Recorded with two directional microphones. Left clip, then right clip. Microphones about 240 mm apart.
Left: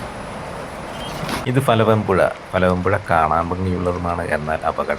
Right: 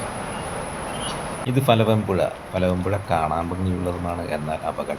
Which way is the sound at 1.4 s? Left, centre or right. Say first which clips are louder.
Left 3 dB; centre.